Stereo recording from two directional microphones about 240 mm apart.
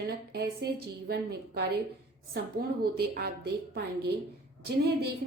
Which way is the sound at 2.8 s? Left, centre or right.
Right.